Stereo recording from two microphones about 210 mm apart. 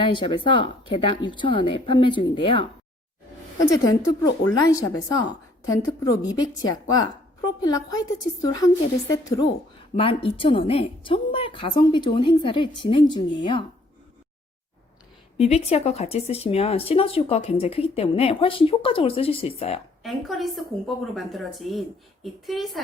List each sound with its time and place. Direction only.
0.0 s a woman's voice: 25° left (ahead or behind)
6.2 s a woman's voice: 20° left (ahead or behind)
15.4 s speech: 30° left (ahead or behind)
20.0 s a woman's voice: centre (ahead or behind)